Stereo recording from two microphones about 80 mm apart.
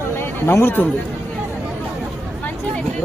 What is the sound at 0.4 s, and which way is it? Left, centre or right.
Speech, left.